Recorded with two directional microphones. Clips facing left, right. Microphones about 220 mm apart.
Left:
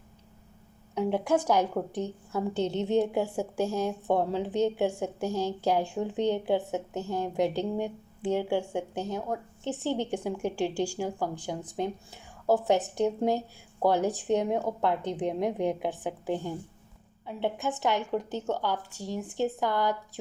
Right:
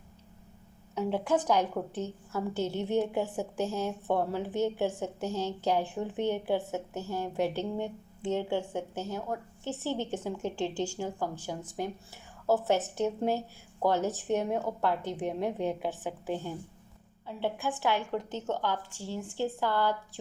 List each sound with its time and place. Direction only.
0.9 s a woman's voice: 15° left (ahead or behind)